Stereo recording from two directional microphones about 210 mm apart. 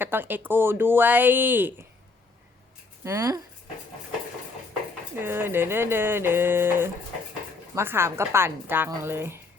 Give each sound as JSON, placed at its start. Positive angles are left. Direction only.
{"t": 0.0, "sound": "speech", "side_deg": -10}
{"t": 3.0, "sound": "speech", "side_deg": -15}
{"t": 5.2, "sound": "speech", "side_deg": -10}